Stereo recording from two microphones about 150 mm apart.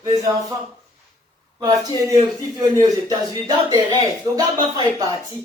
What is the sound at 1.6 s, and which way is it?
Speech, 25° right (ahead or behind).